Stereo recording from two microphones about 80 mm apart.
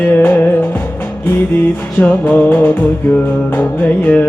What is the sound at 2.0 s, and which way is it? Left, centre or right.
Music, left.